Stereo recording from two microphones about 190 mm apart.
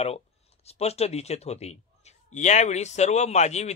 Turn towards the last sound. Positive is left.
turn(degrees=35)  # may be behind; listen again after turning